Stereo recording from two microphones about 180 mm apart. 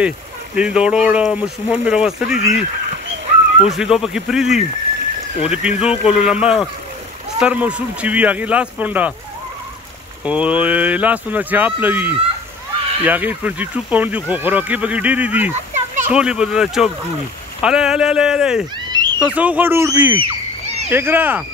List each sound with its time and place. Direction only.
0.6 s speech: 5° right (ahead or behind)
3.6 s speech: centre (ahead or behind)
10.2 s speech: 5° right (ahead or behind)
15.7 s a sound: 45° right (ahead or behind)
16.1 s speech: 5° right (ahead or behind)
18.9 s a sound: 25° right (ahead or behind)
19.1 s speech: 5° right (ahead or behind)